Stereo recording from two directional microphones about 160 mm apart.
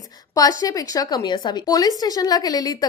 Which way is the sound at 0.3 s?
20° left (ahead or behind).